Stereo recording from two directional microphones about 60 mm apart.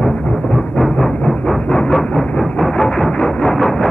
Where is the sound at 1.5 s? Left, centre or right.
Centre.